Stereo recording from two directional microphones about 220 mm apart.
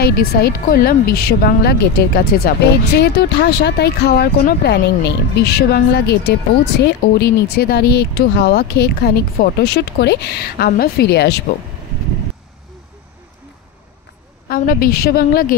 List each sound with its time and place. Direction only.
0.0 s speech: 45° left (ahead or behind)
14.5 s a woman's voice: 40° left (ahead or behind)